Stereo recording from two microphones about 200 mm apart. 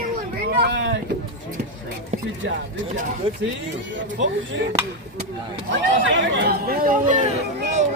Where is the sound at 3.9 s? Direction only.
65° right (ahead or behind).